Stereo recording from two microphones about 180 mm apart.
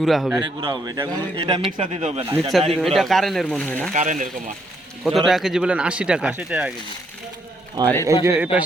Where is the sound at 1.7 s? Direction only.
40° right (ahead or behind).